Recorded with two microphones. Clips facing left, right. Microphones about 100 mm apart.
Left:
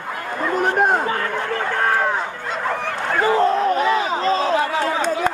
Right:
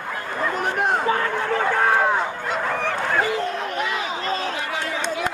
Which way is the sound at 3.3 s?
35° left (ahead or behind).